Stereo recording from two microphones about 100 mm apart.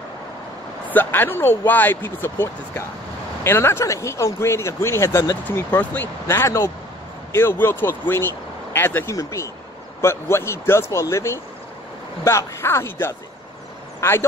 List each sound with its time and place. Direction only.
0.8 s speech: 20° left (ahead or behind)
5.6 s speech: 20° left (ahead or behind)